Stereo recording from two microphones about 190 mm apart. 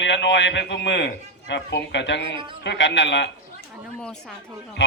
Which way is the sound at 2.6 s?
70° left (ahead or behind).